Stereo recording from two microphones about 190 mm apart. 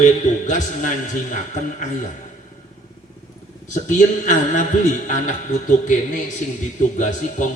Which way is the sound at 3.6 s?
40° left (ahead or behind).